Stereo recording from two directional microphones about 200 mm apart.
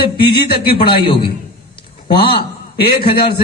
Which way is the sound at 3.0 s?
25° left (ahead or behind).